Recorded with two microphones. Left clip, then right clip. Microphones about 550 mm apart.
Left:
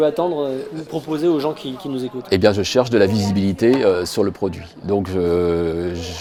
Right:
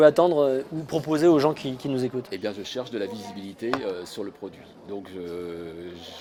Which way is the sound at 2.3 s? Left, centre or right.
Left.